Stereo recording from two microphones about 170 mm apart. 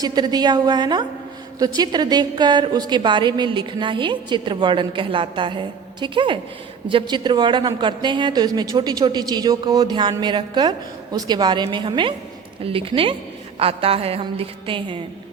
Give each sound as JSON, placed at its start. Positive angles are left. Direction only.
{"t": 0.0, "sound": "a woman's voice", "side_deg": -25}